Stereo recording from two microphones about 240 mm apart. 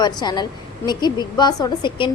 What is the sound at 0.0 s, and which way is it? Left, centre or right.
A woman's voice, centre.